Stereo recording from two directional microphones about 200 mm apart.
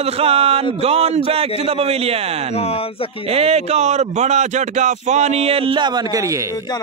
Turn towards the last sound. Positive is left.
turn(degrees=-15)  # may be behind; listen again after turning